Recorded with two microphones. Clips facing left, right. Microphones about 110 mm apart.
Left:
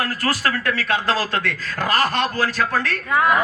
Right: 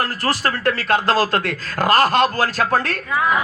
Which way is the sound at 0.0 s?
30° right (ahead or behind).